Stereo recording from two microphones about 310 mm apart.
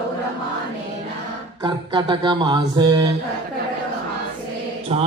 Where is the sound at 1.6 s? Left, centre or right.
Centre.